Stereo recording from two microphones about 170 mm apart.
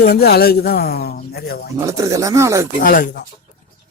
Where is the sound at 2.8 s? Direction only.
55° left (ahead or behind).